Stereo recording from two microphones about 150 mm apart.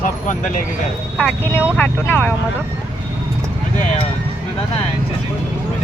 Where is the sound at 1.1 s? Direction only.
10° left (ahead or behind).